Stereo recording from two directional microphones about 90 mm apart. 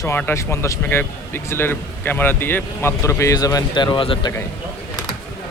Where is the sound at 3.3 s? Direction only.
45° left (ahead or behind).